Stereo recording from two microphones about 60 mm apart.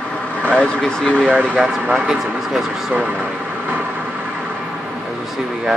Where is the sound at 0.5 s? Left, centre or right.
Centre.